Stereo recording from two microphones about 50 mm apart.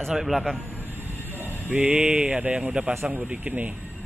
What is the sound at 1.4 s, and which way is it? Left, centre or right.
Speech, right.